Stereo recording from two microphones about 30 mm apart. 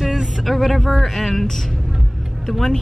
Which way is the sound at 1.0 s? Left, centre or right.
Centre.